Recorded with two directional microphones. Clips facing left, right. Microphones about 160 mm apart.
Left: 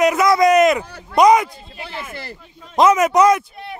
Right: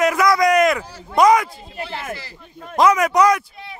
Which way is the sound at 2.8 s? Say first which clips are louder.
Left 2 dB; 20° left (ahead or behind).